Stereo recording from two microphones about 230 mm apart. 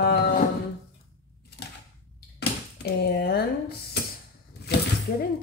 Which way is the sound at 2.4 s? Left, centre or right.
Left.